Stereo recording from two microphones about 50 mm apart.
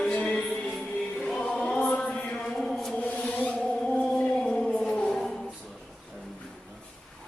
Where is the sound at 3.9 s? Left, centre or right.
Centre.